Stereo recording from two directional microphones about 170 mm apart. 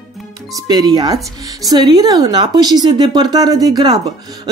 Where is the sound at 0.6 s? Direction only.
25° right (ahead or behind).